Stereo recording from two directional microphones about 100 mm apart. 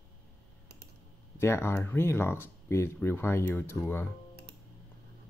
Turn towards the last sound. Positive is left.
turn(degrees=20)  # may be behind; listen again after turning